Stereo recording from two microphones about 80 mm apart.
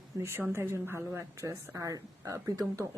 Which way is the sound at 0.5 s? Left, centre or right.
Right.